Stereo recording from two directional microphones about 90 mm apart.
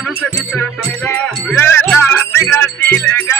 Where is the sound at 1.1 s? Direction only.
15° left (ahead or behind).